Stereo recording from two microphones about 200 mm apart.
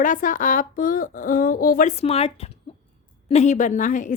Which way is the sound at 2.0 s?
30° left (ahead or behind).